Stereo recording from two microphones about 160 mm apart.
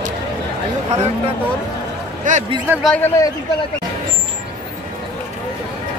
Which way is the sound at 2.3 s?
55° right (ahead or behind).